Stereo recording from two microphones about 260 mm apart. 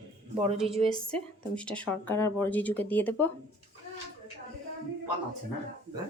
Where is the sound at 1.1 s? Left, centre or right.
Centre.